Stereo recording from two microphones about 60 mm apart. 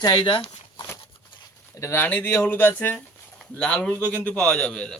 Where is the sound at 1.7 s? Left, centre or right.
Left.